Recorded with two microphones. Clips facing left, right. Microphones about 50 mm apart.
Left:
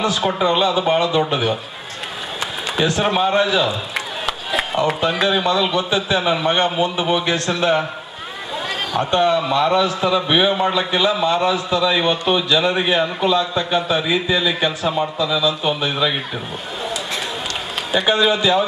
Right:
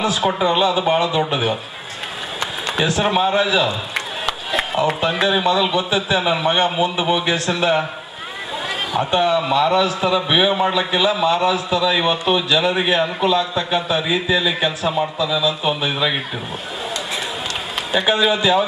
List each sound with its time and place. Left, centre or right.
0.0 s a man's voice: centre
2.4 s a man's voice: centre
8.9 s a man's voice: centre
17.9 s a man's voice: centre